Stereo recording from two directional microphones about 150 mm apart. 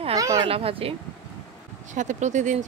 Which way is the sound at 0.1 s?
25° right (ahead or behind).